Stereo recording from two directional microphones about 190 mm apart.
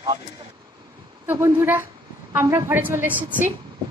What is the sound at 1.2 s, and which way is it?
A woman's voice, 10° right (ahead or behind).